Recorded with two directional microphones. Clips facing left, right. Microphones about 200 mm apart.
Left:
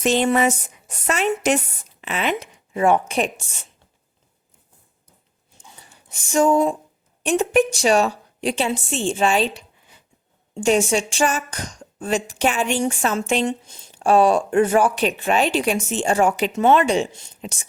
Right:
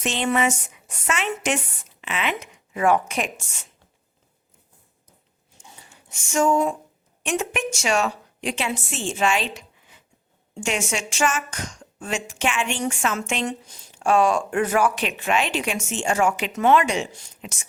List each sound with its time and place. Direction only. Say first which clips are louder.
0.0 s speech: left 5 dB; 40° left (ahead or behind)
5.9 s a woman's voice: left 4 dB; 35° left (ahead or behind)
17.4 s speech: left 5 dB; 35° left (ahead or behind)